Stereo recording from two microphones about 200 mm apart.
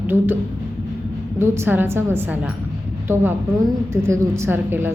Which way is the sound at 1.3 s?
10° right (ahead or behind).